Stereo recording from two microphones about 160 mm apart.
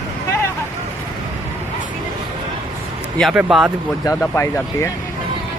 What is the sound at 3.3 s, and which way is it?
Speech, 5° right (ahead or behind).